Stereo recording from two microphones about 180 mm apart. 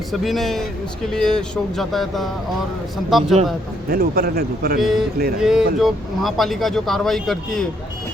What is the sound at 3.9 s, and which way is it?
Speech, 60° right (ahead or behind).